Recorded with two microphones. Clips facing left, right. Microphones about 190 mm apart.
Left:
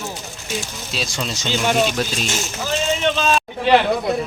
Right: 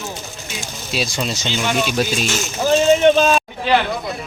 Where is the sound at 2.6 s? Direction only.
50° right (ahead or behind).